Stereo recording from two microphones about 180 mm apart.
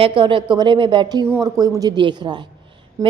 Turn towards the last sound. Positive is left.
turn(degrees=-15)  # may be behind; listen again after turning